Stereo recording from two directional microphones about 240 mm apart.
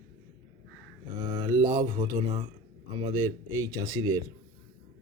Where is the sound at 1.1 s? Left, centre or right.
Centre.